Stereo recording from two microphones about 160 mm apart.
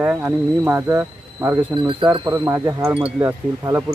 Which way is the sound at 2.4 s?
20° right (ahead or behind).